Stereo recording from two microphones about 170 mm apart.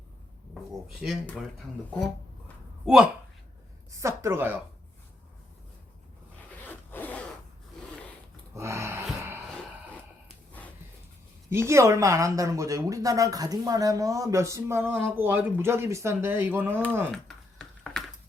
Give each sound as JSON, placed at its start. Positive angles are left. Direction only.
{"t": 1.0, "sound": "speech", "side_deg": 0}
{"t": 2.8, "sound": "speech", "side_deg": -5}
{"t": 3.9, "sound": "speech", "side_deg": -15}
{"t": 6.6, "sound": "zipper", "side_deg": 10}
{"t": 8.5, "sound": "a sound", "side_deg": -15}
{"t": 11.5, "sound": "a woman's voice", "side_deg": -15}
{"t": 17.1, "sound": "typing", "side_deg": 5}